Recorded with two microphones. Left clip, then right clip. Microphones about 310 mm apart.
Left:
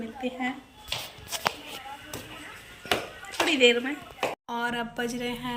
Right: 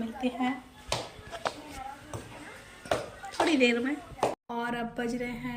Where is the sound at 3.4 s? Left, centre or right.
Centre.